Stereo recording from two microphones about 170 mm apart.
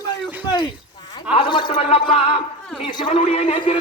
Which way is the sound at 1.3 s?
25° left (ahead or behind).